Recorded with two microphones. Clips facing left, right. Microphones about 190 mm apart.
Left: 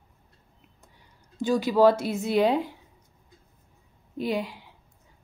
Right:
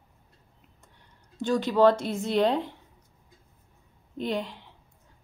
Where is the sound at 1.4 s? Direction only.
10° left (ahead or behind).